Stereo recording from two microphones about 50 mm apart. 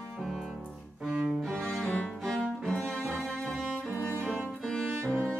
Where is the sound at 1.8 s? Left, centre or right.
Left.